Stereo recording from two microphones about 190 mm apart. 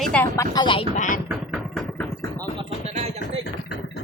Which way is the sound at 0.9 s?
40° left (ahead or behind).